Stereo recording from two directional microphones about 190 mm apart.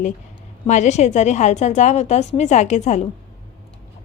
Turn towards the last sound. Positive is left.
turn(degrees=40)  # may be behind; listen again after turning